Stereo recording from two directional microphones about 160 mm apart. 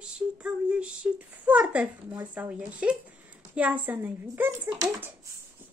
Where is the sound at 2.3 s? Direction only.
10° right (ahead or behind).